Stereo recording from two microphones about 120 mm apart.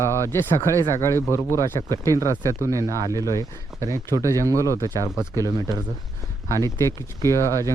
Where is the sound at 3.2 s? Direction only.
25° left (ahead or behind).